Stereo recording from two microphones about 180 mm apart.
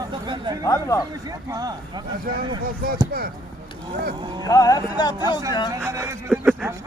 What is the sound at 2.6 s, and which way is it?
Speech, 55° right (ahead or behind).